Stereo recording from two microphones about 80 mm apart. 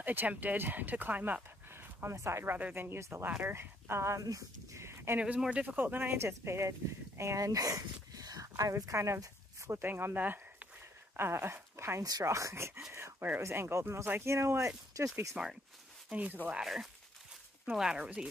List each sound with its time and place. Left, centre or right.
0.0 s speech: right
1.7 s a sound: right
2.5 s speech: right
4.2 s speech: right
5.2 s speech: centre; by 12.0 s right
12.0 s speech: right
12.9 s a sound: right
13.4 s speech: right
15.4 s speech: centre
16.6 s speech: centre